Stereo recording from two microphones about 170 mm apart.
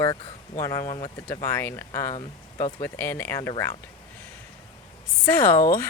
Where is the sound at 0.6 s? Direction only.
20° left (ahead or behind).